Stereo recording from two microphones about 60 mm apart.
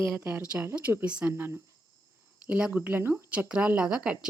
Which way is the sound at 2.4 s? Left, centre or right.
Centre.